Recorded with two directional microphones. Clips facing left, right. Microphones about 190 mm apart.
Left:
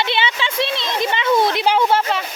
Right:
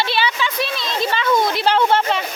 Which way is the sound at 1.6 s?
10° left (ahead or behind).